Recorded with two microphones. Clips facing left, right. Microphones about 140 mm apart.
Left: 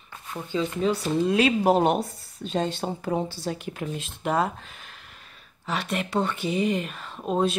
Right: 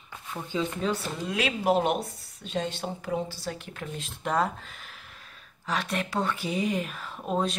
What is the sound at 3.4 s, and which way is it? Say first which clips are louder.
Speech: left 5 dB; 15° left (ahead or behind).